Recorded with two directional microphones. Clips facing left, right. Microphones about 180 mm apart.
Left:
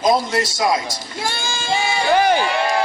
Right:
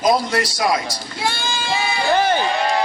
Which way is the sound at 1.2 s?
45° left (ahead or behind).